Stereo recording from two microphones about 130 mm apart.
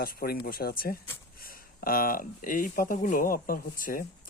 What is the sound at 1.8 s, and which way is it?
Speech, 90° left.